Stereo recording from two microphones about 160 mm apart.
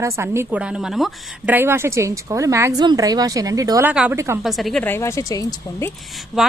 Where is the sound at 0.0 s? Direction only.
15° right (ahead or behind).